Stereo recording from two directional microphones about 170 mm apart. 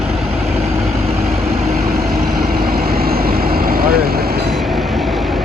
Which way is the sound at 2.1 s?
60° right (ahead or behind).